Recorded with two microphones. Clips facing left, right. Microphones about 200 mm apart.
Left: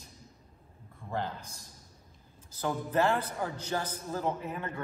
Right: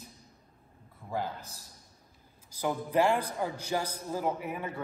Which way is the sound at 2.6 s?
10° right (ahead or behind).